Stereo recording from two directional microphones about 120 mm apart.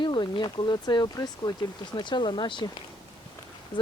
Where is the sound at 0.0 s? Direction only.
40° left (ahead or behind).